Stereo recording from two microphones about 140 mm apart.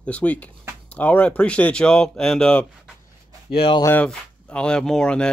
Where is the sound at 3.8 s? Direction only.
10° left (ahead or behind).